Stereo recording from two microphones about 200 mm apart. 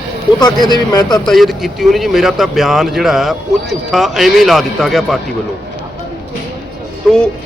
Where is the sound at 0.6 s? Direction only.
20° left (ahead or behind).